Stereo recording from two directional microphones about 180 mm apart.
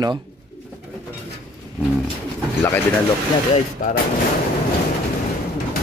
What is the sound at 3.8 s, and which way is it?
Speech, 50° left (ahead or behind).